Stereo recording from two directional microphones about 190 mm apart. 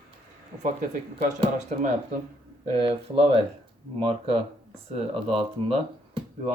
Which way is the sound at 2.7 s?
30° right (ahead or behind).